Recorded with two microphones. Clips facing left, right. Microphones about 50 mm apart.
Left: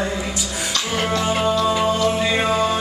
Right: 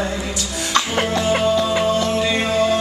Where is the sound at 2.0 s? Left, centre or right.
Centre.